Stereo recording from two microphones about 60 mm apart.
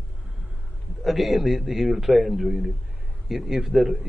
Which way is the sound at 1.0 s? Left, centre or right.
Centre.